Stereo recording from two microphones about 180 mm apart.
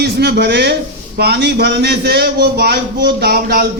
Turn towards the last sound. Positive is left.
turn(degrees=-60)  # may be behind; listen again after turning